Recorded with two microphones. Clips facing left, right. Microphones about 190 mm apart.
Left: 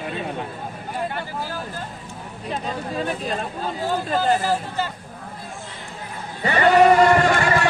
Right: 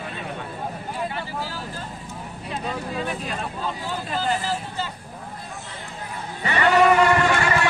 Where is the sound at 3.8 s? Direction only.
45° left (ahead or behind).